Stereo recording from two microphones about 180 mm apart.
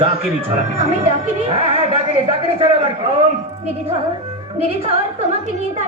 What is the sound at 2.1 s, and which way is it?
A man's voice, 30° right (ahead or behind).